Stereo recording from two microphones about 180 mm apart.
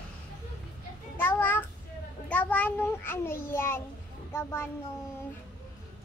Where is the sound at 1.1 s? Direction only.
10° left (ahead or behind).